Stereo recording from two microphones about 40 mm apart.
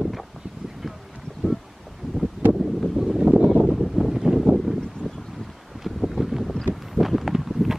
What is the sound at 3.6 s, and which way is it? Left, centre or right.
Wind noise, centre.